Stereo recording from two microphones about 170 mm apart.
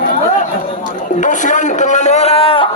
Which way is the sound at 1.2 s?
45° left (ahead or behind).